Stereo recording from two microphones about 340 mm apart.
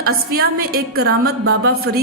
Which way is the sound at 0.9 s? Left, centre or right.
Right.